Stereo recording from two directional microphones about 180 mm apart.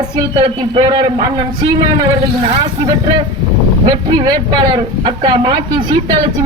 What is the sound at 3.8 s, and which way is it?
Speech, 25° right (ahead or behind).